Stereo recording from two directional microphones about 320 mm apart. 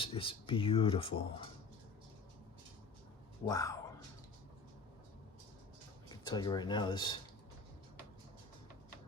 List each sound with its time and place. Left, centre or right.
0.0 s speech: centre
3.4 s speech: centre
6.1 s speech: centre